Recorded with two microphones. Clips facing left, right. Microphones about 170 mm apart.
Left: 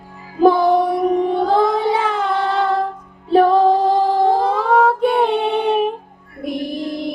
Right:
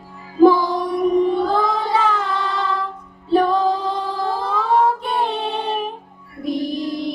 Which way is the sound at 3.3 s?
60° left (ahead or behind).